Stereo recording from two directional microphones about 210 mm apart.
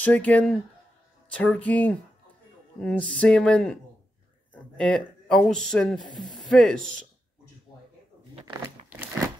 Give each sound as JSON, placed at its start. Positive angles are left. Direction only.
{"t": 0.0, "sound": "speech", "side_deg": 5}